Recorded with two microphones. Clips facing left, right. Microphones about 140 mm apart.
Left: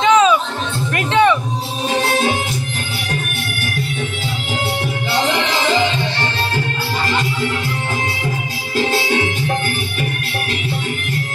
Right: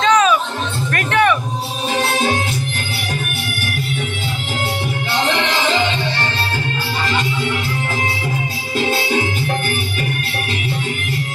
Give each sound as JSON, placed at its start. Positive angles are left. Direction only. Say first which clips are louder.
{"t": 0.0, "sound": "music", "louder": "left 2 dB", "side_deg": 20}